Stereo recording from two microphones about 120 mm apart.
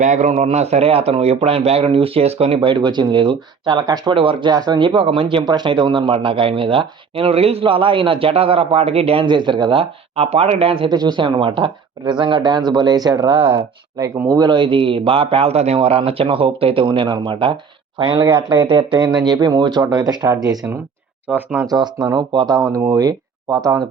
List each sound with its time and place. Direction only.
0.0 s speech: 85° right; by 9.2 s 55° right (ahead or behind)
9.2 s speech: 40° right (ahead or behind)
10.8 s speech: 35° right (ahead or behind)
21.2 s speech: 15° right (ahead or behind)
21.7 s speech: 35° right (ahead or behind)